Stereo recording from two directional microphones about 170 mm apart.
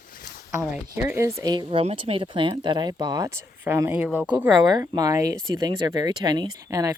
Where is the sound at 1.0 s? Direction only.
10° right (ahead or behind).